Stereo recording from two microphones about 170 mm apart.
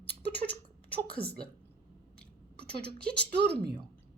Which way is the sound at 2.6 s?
70° right (ahead or behind).